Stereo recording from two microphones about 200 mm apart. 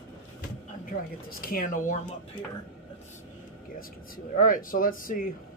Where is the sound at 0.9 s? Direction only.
45° left (ahead or behind).